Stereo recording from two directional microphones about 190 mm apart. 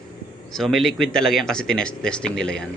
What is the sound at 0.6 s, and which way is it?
Speech, centre (ahead or behind).